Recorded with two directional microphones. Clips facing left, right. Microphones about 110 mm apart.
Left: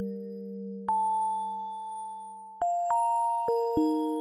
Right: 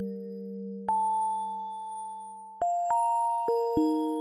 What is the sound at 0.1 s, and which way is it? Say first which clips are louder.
Music: even; 15° right (ahead or behind).